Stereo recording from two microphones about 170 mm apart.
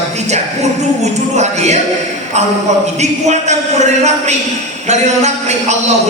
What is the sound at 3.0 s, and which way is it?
A man's voice, 40° right (ahead or behind).